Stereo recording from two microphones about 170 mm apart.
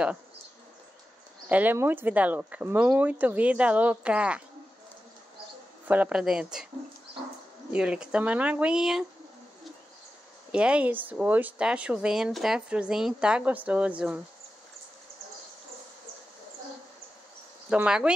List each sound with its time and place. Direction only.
1.5 s speech: 10° right (ahead or behind)
5.9 s speech: 10° right (ahead or behind)
7.7 s speech: 5° right (ahead or behind)
10.5 s speech: 5° right (ahead or behind)
17.6 s speech: 5° right (ahead or behind)